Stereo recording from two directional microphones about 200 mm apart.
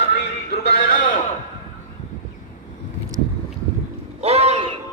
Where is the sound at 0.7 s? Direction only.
40° left (ahead or behind).